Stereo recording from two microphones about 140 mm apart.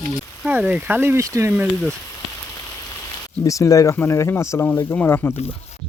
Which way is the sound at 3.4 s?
25° left (ahead or behind).